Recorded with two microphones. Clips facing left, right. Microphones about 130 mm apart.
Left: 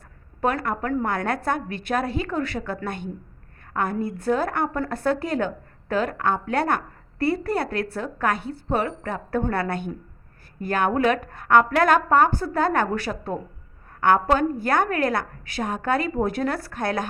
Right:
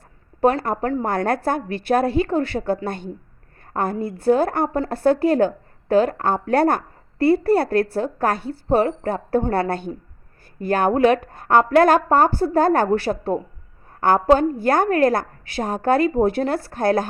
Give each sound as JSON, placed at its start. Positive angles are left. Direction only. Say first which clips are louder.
{"t": 0.4, "sound": "a woman's voice", "louder": "right 5 dB", "side_deg": -35}